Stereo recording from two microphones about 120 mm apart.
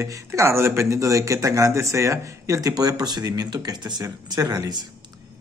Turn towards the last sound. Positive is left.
turn(degrees=-30)  # may be behind; listen again after turning